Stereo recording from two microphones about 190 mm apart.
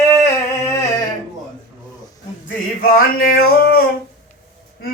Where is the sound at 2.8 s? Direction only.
50° left (ahead or behind).